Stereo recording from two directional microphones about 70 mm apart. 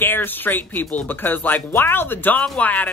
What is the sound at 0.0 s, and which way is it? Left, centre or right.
Speech, left.